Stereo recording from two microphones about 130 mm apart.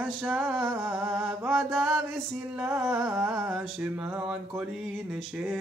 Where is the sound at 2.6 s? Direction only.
15° right (ahead or behind).